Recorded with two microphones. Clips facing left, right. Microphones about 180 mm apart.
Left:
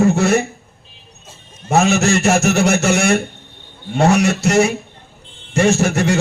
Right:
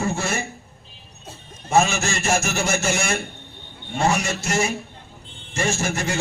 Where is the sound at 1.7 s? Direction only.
65° left (ahead or behind).